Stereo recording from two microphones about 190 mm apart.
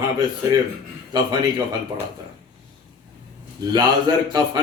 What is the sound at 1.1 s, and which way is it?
Speech, 20° right (ahead or behind).